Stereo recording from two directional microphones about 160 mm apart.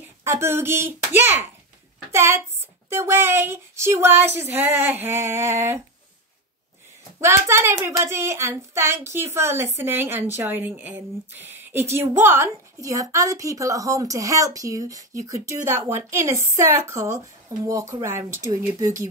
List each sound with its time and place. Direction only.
0.2 s speech: 15° right (ahead or behind)
7.2 s a woman's voice: 15° right (ahead or behind)